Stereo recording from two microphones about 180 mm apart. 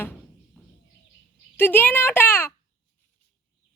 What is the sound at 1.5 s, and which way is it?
Speech, 10° left (ahead or behind).